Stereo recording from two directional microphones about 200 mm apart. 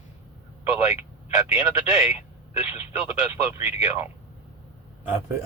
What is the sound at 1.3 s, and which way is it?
Speech, 15° right (ahead or behind).